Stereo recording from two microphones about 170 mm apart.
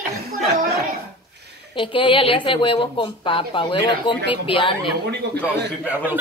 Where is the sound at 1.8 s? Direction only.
30° left (ahead or behind).